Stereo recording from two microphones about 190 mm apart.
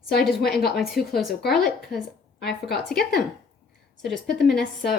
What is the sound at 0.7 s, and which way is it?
Speech, centre (ahead or behind).